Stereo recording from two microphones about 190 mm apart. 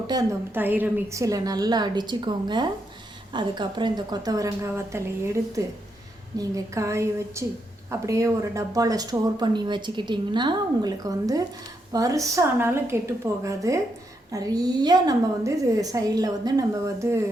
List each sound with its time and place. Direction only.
0.1 s a woman's voice: 15° right (ahead or behind)